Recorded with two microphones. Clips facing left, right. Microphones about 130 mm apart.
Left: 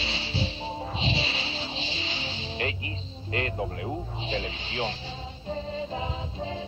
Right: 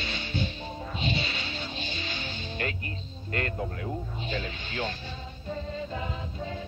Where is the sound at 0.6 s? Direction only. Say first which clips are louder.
Left 2 dB; 30° left (ahead or behind).